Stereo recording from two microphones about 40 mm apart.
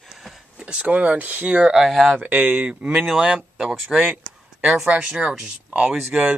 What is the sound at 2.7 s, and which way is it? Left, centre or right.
Speech, right.